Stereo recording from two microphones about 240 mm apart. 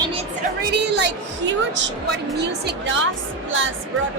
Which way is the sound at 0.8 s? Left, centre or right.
Right.